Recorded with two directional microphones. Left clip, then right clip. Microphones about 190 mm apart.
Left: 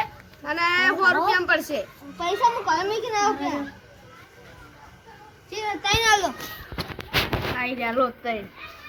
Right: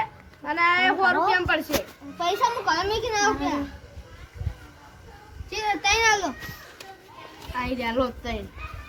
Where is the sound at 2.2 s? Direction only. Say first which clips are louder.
Left 2 dB; 10° right (ahead or behind).